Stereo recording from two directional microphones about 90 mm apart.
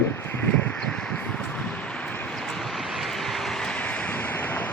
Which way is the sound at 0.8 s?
10° left (ahead or behind).